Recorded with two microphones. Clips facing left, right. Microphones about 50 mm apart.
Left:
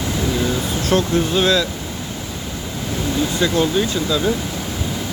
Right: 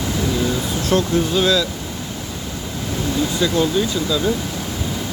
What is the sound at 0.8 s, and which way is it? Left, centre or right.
Speech, left.